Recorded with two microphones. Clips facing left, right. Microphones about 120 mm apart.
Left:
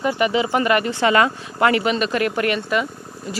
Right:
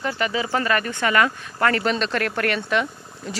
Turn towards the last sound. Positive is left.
turn(degrees=5)  # may be behind; listen again after turning